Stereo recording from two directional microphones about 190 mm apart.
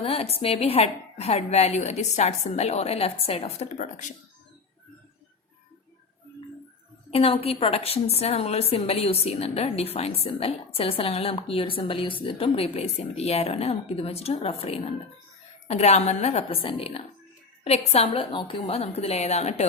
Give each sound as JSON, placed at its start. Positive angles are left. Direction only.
{"t": 0.0, "sound": "a woman's voice", "side_deg": 30}
{"t": 7.1, "sound": "a woman's voice", "side_deg": 30}